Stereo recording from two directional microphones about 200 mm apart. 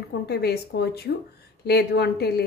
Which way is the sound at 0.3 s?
55° left (ahead or behind).